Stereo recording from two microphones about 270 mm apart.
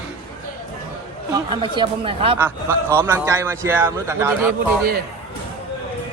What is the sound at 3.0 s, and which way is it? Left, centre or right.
Speech, centre.